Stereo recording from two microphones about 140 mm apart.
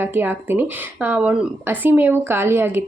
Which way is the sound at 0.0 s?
15° right (ahead or behind).